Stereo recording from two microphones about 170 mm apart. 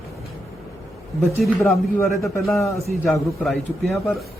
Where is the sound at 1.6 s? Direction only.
15° left (ahead or behind).